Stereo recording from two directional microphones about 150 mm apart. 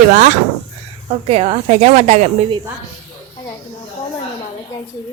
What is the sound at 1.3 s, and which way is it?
Speech, 45° right (ahead or behind).